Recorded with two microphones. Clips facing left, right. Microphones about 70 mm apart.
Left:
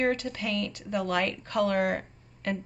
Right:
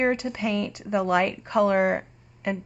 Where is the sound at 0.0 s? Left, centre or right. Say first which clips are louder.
Right 4 dB; centre.